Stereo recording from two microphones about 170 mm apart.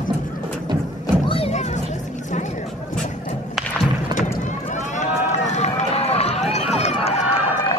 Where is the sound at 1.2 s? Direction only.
35° left (ahead or behind).